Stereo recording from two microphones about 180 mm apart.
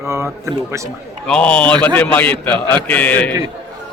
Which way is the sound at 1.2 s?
5° left (ahead or behind).